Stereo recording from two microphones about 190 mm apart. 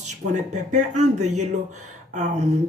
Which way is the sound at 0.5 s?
40° right (ahead or behind).